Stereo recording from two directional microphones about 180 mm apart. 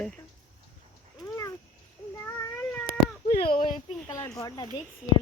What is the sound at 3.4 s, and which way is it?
Speech, 30° left (ahead or behind).